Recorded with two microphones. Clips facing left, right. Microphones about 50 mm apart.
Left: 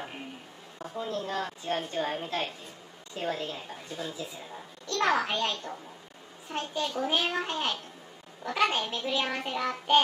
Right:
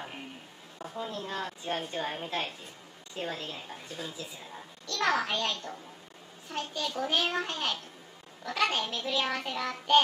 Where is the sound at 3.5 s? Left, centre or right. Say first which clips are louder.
Left 2 dB; centre.